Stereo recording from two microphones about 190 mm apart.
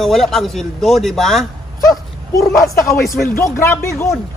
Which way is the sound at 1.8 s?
20° left (ahead or behind).